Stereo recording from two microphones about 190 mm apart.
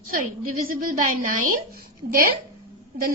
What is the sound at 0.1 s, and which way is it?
A woman's voice, 45° right (ahead or behind).